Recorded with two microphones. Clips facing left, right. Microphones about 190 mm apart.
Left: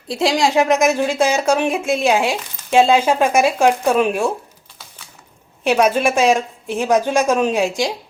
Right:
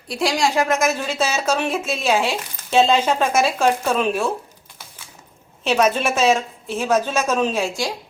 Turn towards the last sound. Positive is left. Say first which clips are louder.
# left 4 dB
turn(degrees=20)  # may be behind; listen again after turning